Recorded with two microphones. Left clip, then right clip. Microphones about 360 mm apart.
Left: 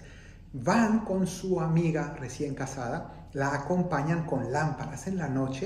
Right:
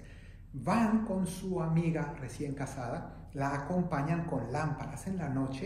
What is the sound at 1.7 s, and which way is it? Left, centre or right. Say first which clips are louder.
A man's voice: left 5 dB; centre.